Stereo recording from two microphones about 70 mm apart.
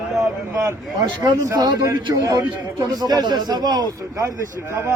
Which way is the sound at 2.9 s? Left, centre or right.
Right.